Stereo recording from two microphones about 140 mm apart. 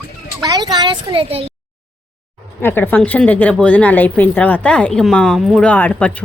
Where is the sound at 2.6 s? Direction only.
15° left (ahead or behind).